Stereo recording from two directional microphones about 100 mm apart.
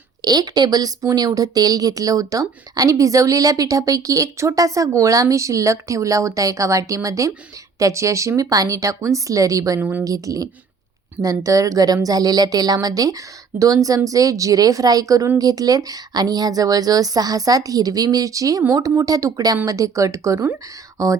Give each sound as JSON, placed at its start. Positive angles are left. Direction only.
{"t": 0.2, "sound": "a woman's voice", "side_deg": -40}